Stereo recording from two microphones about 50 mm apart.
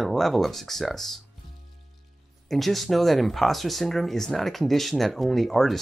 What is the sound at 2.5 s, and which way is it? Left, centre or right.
Speech, centre.